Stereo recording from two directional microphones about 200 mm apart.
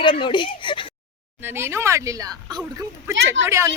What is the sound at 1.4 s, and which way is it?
A woman's voice, 10° right (ahead or behind).